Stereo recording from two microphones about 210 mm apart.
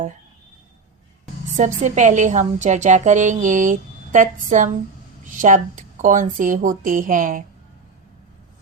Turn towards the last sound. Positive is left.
turn(degrees=-40)  # may be behind; listen again after turning